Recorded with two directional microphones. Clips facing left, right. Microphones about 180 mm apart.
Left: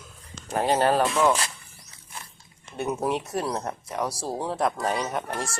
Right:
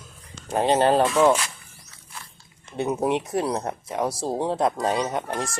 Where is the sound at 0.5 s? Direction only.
20° right (ahead or behind).